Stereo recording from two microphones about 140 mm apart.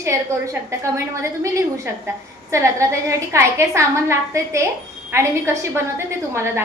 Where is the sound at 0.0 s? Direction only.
20° right (ahead or behind).